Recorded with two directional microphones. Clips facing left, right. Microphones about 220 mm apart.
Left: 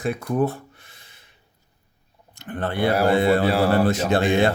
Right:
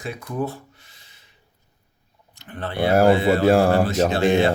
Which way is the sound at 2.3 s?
50° left (ahead or behind).